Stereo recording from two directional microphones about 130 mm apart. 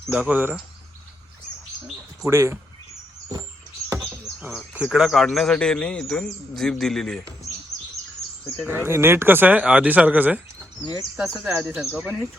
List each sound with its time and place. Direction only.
0.1 s speech: 10° right (ahead or behind)
2.2 s speech: 20° right (ahead or behind)
4.7 s speech: 10° right (ahead or behind)
8.6 s speech: 15° right (ahead or behind); by 12.1 s centre (ahead or behind)